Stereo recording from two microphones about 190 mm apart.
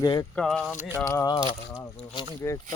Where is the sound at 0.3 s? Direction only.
5° left (ahead or behind).